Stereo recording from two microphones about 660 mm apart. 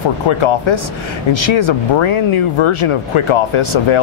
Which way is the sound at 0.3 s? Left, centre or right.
Left.